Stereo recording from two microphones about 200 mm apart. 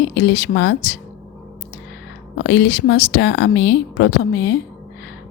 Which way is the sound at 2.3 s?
60° left (ahead or behind).